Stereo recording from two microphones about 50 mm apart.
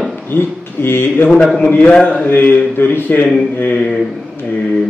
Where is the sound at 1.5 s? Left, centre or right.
Left.